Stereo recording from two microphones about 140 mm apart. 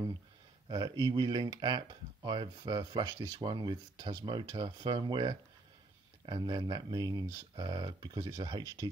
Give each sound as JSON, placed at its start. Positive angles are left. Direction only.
{"t": 0.7, "sound": "speech", "side_deg": -30}